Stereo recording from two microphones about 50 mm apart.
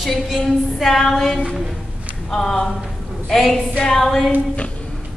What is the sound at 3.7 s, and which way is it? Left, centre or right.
Speech, centre.